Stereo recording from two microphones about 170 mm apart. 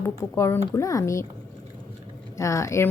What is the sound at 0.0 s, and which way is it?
Speech, 15° left (ahead or behind).